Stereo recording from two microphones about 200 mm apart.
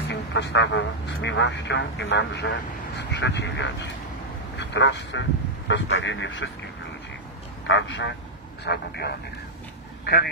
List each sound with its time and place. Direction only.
0.1 s a man's voice: 60° left (ahead or behind)
7.6 s a man's voice: 65° left (ahead or behind)
8.6 s speech: 55° left (ahead or behind)